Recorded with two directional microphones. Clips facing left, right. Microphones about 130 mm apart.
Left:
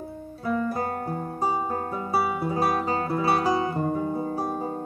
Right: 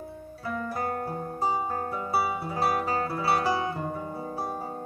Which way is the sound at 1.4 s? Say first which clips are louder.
Left 1 dB; 25° left (ahead or behind).